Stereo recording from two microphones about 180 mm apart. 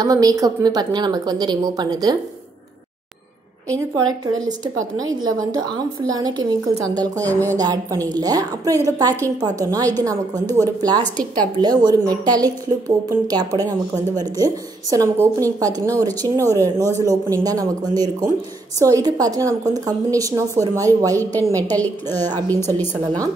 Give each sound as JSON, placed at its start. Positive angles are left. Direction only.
{"t": 0.0, "sound": "a woman's voice", "side_deg": -20}
{"t": 3.9, "sound": "a woman's voice", "side_deg": -20}
{"t": 22.5, "sound": "a woman's voice", "side_deg": 10}
{"t": 22.9, "sound": "a woman's voice", "side_deg": -20}